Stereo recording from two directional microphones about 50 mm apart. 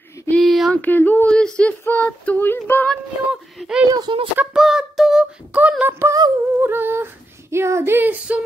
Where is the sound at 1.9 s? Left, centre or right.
Left.